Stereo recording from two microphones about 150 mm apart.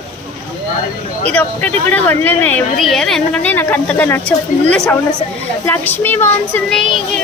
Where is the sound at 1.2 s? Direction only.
10° left (ahead or behind).